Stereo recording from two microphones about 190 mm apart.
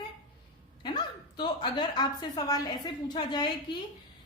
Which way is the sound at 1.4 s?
20° left (ahead or behind).